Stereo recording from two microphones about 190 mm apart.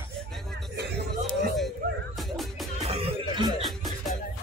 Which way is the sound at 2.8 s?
30° right (ahead or behind).